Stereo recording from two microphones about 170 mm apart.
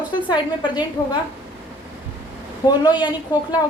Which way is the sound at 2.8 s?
25° left (ahead or behind).